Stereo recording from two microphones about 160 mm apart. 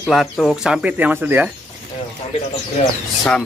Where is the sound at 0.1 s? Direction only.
Centre (ahead or behind).